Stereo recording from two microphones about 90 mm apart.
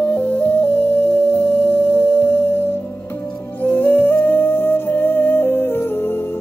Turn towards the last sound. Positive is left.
turn(degrees=25)  # may be behind; listen again after turning